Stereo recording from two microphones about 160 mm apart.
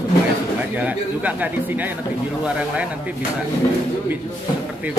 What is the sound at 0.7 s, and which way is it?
A man's voice, 10° right (ahead or behind).